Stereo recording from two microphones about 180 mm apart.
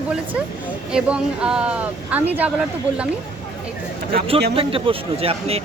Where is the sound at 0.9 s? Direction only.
5° right (ahead or behind).